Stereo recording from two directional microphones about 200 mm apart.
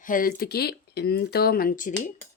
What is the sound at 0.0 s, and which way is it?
Speech, 45° left (ahead or behind).